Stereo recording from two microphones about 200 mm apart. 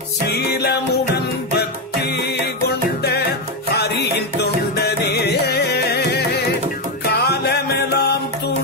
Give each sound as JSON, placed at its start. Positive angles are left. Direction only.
{"t": 0.3, "sound": "music", "side_deg": 55}
{"t": 3.7, "sound": "music", "side_deg": 55}